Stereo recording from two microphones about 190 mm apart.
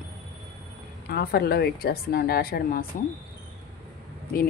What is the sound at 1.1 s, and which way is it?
A woman's voice, 55° left (ahead or behind).